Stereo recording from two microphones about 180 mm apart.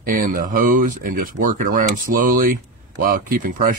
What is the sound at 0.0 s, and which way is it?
Speech, 50° right (ahead or behind).